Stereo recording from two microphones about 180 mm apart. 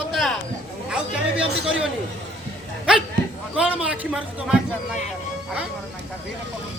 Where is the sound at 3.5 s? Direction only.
5° right (ahead or behind).